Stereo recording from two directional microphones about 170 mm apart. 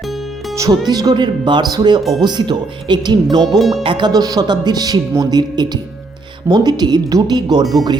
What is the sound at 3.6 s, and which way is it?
Speech, centre (ahead or behind).